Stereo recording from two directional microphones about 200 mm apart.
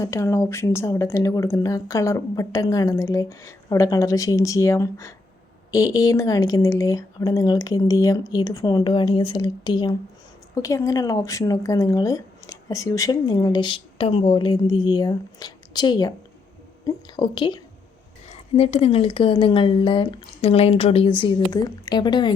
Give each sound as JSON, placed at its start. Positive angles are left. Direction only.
{"t": 0.0, "sound": "a woman's voice", "side_deg": 15}